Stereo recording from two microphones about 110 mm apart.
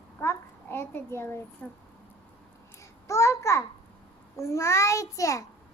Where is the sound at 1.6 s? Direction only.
10° left (ahead or behind).